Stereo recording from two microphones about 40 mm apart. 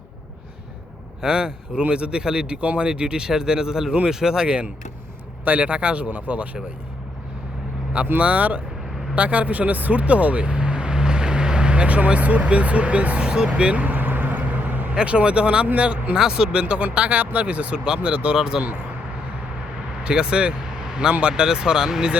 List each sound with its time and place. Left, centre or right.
1.2 s speech: right
8.2 s speech: right
13.8 s vehicle: right
14.9 s speech: right
16.1 s speech: centre; by 18.3 s right
18.3 s speech: centre
20.1 s speech: right